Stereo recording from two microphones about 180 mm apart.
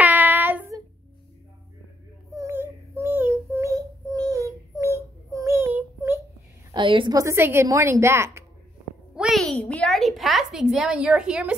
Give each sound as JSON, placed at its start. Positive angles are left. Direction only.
{"t": 0.0, "sound": "child singing", "side_deg": -10}
{"t": 2.3, "sound": "child singing", "side_deg": -15}
{"t": 6.7, "sound": "a woman's voice", "side_deg": -25}
{"t": 9.1, "sound": "a woman's voice", "side_deg": 0}